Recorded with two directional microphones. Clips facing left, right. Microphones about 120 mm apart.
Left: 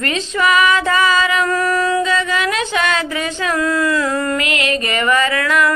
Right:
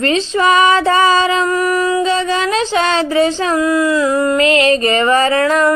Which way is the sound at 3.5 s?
15° right (ahead or behind).